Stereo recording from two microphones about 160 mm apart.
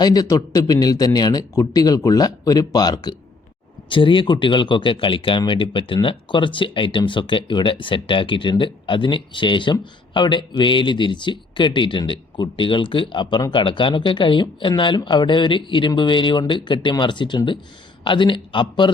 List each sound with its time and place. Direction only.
0.0 s speech: 25° left (ahead or behind)